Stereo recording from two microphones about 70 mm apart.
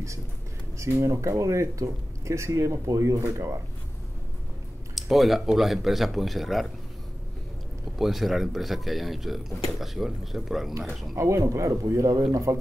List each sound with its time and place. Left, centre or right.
0.7 s speech: right
4.9 s speech: centre
8.0 s speech: centre
11.1 s speech: right